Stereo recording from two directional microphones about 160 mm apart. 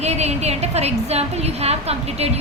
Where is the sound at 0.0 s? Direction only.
40° right (ahead or behind).